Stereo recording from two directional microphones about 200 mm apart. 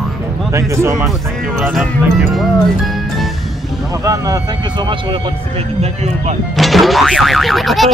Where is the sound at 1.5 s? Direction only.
5° right (ahead or behind).